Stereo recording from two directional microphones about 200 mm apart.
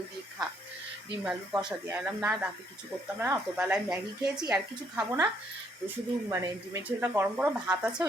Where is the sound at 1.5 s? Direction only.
20° right (ahead or behind).